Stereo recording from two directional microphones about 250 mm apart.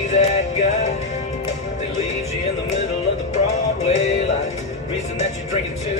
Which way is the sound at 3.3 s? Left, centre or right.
Left.